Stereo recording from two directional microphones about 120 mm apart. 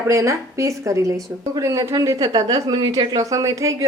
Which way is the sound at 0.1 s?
25° right (ahead or behind).